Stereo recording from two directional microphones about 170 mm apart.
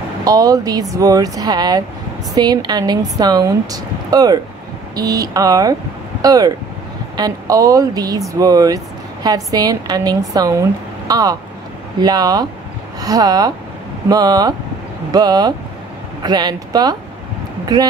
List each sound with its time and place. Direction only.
0.2 s speech: 20° right (ahead or behind)